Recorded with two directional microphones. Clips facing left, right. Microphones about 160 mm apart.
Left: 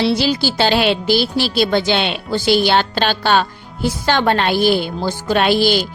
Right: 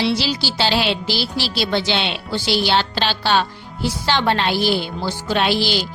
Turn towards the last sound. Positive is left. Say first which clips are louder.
# left 5 dB
turn(degrees=50)  # may be behind; listen again after turning